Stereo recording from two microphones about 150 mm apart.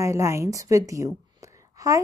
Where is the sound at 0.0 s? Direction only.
20° right (ahead or behind).